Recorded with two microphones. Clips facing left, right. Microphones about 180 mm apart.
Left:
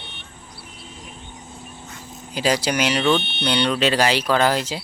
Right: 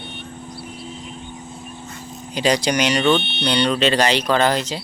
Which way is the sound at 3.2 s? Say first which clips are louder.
Right 3 dB; 45° left (ahead or behind).